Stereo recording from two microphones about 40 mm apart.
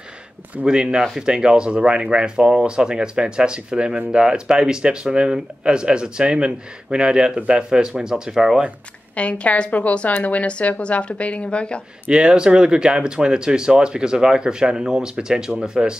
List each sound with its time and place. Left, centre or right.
0.7 s speech: right
9.1 s a woman's voice: left
12.1 s speech: right